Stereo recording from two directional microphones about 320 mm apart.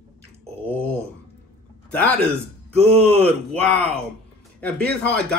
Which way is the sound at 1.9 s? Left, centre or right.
Centre.